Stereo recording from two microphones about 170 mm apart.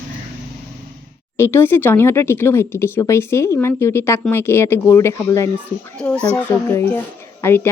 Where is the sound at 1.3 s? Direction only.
15° left (ahead or behind).